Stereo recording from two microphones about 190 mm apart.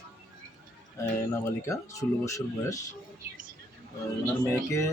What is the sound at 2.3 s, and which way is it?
Speech, 15° left (ahead or behind).